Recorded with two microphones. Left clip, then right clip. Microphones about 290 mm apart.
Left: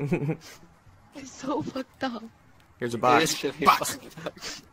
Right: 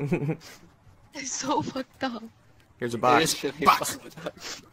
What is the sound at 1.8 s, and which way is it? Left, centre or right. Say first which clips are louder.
Speech: even; centre.